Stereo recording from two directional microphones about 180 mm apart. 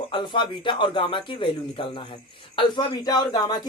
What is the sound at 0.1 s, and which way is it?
Speech, 25° left (ahead or behind).